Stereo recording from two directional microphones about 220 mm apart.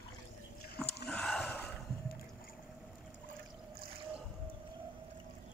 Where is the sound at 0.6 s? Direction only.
45° left (ahead or behind).